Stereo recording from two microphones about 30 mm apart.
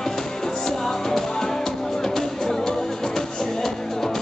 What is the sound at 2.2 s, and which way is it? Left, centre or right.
Music, centre.